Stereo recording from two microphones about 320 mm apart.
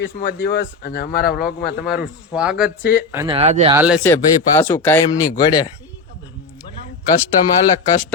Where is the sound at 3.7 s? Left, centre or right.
Centre.